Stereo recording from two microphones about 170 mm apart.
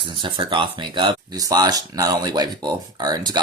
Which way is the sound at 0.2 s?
30° right (ahead or behind).